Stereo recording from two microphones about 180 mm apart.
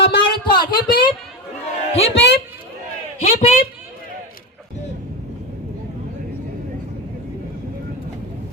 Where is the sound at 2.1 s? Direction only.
70° left (ahead or behind).